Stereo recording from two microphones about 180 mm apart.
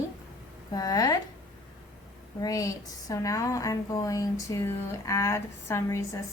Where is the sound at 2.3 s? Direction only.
20° left (ahead or behind).